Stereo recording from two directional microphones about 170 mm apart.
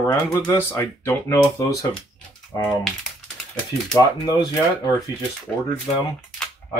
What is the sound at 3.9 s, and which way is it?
Speech, 20° left (ahead or behind).